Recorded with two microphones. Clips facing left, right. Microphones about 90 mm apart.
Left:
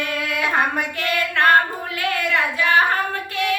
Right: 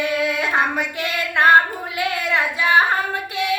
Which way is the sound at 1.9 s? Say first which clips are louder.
Even; 15° right (ahead or behind).